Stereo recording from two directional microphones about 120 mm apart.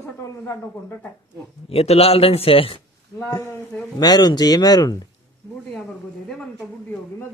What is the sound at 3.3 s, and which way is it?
Speech, 30° left (ahead or behind).